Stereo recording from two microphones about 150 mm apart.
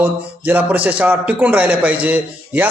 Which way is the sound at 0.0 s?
10° right (ahead or behind).